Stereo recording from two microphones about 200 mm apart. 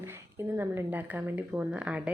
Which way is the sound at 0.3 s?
10° right (ahead or behind).